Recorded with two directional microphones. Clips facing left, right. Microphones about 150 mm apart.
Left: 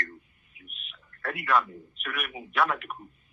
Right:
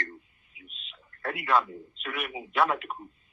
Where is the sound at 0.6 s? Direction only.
25° right (ahead or behind).